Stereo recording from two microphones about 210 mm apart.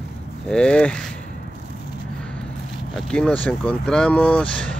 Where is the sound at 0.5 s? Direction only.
5° left (ahead or behind).